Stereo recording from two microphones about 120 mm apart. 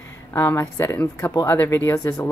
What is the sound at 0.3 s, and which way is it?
Speech, 20° left (ahead or behind).